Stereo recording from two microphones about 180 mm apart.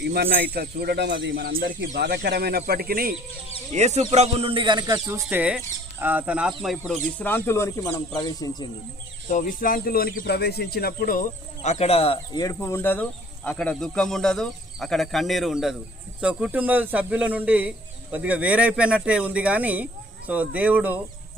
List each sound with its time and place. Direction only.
0.0 s speech: 60° right (ahead or behind)
3.7 s a man's voice: 40° right (ahead or behind)
5.2 s speech: 5° right (ahead or behind); by 8.6 s 20° left (ahead or behind)
9.3 s speech: 50° left (ahead or behind); by 21.0 s 10° right (ahead or behind)